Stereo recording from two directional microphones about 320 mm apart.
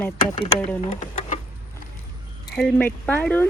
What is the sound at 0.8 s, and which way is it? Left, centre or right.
Speech, left.